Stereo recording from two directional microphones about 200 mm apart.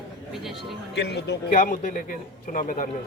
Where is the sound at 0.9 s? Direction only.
55° left (ahead or behind).